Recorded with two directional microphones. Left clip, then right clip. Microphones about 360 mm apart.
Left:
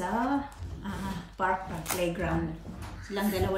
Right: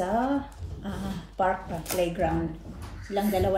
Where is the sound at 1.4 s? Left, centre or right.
Centre.